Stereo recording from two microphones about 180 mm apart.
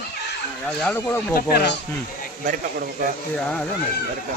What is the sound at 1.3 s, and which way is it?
Speech, 60° left (ahead or behind).